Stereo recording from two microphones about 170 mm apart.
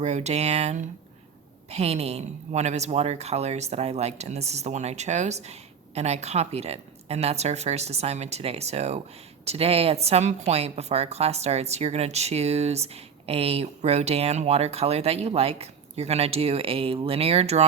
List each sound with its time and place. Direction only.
0.0 s speech: 40° right (ahead or behind)